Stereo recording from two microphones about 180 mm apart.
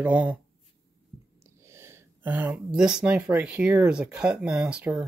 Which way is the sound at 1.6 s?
15° right (ahead or behind).